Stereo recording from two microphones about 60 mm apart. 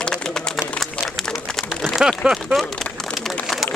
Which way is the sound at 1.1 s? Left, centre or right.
Centre.